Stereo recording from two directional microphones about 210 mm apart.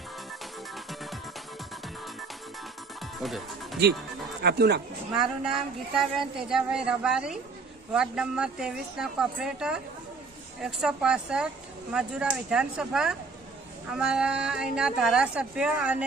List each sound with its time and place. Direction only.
3.2 s speech: centre (ahead or behind)
4.4 s speech: 50° right (ahead or behind)
5.1 s speech: 5° right (ahead or behind)